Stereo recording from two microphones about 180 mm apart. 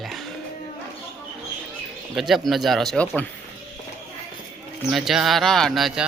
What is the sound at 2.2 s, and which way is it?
Speech, centre (ahead or behind).